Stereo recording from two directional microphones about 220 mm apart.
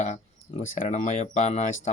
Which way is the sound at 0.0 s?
30° left (ahead or behind).